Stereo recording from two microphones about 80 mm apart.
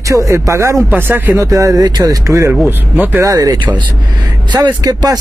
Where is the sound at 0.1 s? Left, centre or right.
Right.